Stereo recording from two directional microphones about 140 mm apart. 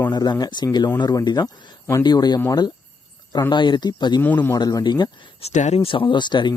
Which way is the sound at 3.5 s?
35° left (ahead or behind).